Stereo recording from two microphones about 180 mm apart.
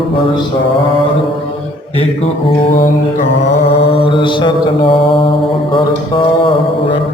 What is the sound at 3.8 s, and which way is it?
Mantra, 30° left (ahead or behind).